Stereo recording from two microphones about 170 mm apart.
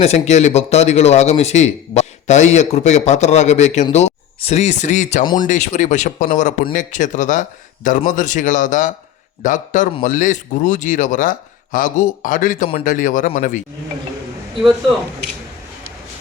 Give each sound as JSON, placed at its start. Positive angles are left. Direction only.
{"t": 0.0, "sound": "speech", "side_deg": 40}